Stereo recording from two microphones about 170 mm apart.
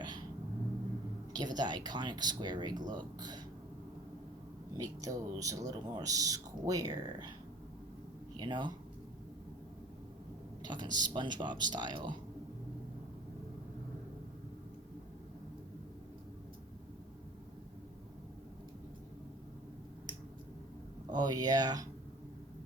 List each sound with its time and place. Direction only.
1.3 s speech: 25° right (ahead or behind)
4.8 s speech: 20° right (ahead or behind)
8.4 s speech: 25° right (ahead or behind)
10.6 s speech: 25° right (ahead or behind)
21.1 s speech: 25° right (ahead or behind)